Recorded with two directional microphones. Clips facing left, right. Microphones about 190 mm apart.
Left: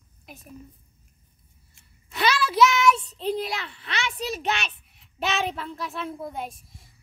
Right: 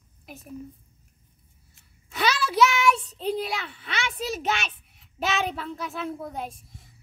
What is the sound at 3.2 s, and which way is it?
A child's voice, centre (ahead or behind).